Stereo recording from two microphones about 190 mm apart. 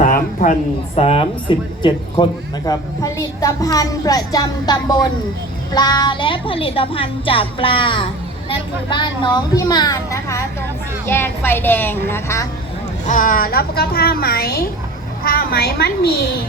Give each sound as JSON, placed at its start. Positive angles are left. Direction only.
{"t": 0.0, "sound": "a sound", "side_deg": 45}
{"t": 0.9, "sound": "a woman's voice", "side_deg": 30}
{"t": 13.1, "sound": "a woman's voice", "side_deg": 45}